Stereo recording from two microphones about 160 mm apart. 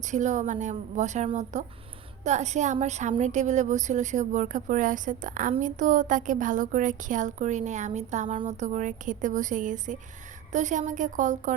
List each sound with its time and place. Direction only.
0.0 s a woman's voice: 50° right (ahead or behind)